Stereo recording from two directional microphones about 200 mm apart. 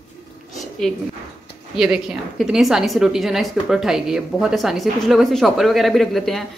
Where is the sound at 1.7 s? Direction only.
Centre (ahead or behind).